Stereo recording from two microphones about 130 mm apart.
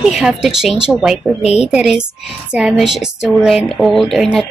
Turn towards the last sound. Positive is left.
turn(degrees=0)  # may be behind; listen again after turning